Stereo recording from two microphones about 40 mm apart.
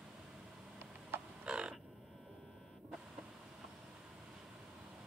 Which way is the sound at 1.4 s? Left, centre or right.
Right.